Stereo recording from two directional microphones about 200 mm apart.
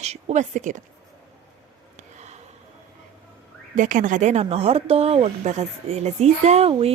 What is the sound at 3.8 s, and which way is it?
Speech, 40° right (ahead or behind).